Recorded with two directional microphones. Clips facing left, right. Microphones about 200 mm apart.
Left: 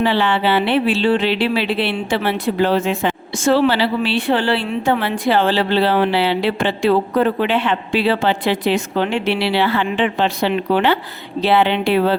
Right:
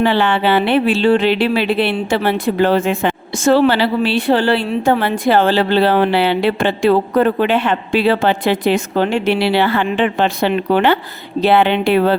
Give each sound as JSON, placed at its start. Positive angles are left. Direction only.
{"t": 0.0, "sound": "speech", "side_deg": -50}